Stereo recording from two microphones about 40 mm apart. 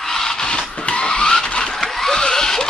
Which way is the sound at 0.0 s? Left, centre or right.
Centre.